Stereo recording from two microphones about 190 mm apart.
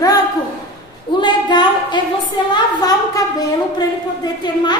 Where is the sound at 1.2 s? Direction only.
25° left (ahead or behind).